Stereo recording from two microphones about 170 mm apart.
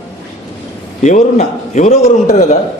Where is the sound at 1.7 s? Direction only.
45° left (ahead or behind).